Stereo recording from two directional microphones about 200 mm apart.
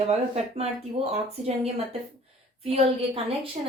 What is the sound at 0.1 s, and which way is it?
Speech, 30° right (ahead or behind).